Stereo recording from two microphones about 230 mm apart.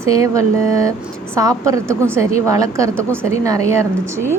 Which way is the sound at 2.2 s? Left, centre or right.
Left.